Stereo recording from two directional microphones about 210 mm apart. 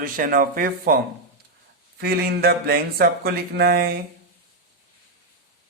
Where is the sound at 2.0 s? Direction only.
45° right (ahead or behind).